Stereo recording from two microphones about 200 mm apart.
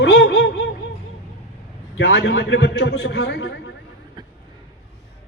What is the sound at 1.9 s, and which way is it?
A man's voice, 70° left (ahead or behind).